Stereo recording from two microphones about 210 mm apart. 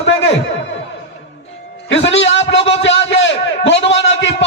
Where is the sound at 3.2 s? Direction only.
60° left (ahead or behind).